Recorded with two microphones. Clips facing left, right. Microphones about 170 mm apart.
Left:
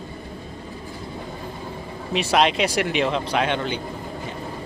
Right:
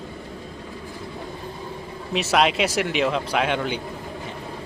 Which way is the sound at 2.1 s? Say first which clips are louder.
Left 1 dB; centre (ahead or behind).